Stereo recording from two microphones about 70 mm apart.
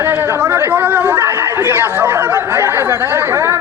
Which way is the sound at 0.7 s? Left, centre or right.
Right.